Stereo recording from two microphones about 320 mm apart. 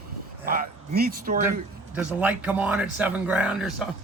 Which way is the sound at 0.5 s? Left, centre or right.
Right.